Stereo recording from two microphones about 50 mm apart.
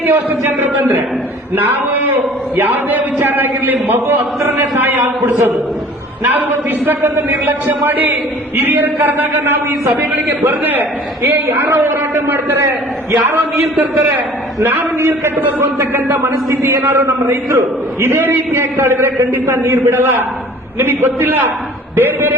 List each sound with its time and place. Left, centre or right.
0.0 s a man's voice: right
8.5 s a man's voice: right
8.8 s a man's voice: right
14.9 s a man's voice: right
15.4 s a man's voice: right
18.2 s a man's voice: right